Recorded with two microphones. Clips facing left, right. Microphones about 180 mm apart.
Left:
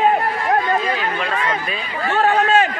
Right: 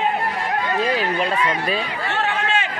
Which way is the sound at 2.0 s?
45° left (ahead or behind).